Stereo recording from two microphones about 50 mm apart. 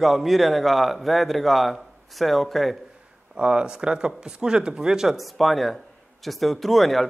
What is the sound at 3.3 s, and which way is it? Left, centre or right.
Speech, centre.